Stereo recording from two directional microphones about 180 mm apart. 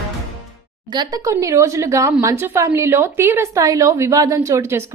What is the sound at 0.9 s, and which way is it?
A woman's voice, 20° right (ahead or behind).